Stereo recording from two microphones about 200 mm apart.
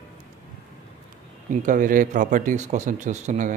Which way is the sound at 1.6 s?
40° right (ahead or behind).